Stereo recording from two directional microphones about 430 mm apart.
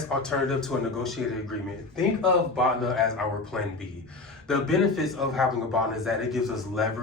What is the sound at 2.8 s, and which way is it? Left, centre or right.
A man's voice, centre.